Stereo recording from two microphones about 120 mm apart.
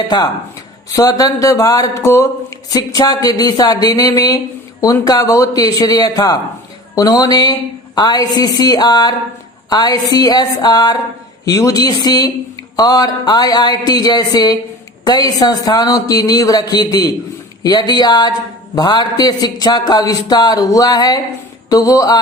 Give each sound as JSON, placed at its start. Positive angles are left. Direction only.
{"t": 0.9, "sound": "speech", "side_deg": 30}